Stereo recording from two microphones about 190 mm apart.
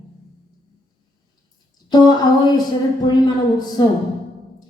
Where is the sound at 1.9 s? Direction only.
20° left (ahead or behind).